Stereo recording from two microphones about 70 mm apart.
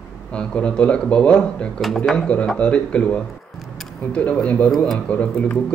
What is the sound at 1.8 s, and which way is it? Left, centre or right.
A man's voice, centre.